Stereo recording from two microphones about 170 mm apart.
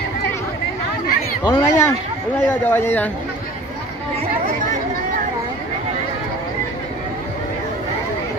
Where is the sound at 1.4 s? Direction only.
20° left (ahead or behind).